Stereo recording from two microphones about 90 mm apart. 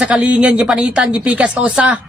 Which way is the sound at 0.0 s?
15° right (ahead or behind).